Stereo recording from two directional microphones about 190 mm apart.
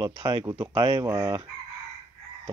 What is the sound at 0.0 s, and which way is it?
Speech, 25° right (ahead or behind).